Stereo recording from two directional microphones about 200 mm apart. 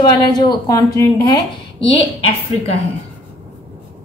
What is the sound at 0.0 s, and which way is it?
A woman's voice, 20° left (ahead or behind).